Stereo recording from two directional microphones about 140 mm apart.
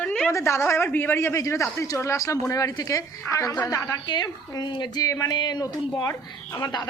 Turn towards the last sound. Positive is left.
turn(degrees=25)  # may be behind; listen again after turning